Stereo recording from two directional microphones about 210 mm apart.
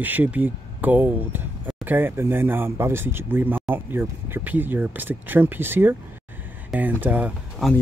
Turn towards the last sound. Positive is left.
turn(degrees=0)  # may be behind; listen again after turning